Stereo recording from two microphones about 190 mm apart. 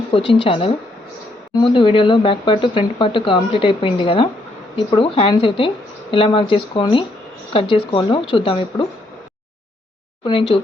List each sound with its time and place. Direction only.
0.2 s speech: 70° left (ahead or behind)
0.4 s speech: 30° left (ahead or behind)
10.2 s speech: 30° left (ahead or behind)